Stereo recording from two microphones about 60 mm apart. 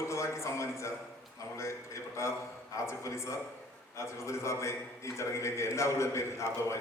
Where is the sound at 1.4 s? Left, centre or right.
Left.